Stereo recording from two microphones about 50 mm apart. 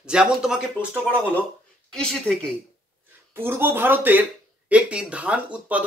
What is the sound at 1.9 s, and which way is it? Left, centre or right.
Speech, centre.